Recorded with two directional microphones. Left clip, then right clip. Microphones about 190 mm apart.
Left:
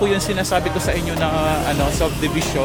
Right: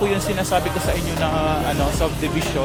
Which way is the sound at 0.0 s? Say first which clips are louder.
Left 2 dB; 15° left (ahead or behind).